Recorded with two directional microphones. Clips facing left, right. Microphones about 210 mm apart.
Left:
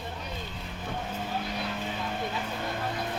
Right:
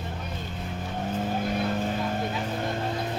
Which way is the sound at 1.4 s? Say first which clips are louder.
Right 7 dB; 50° right (ahead or behind).